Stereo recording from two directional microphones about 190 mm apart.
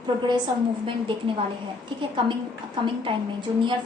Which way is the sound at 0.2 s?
25° right (ahead or behind).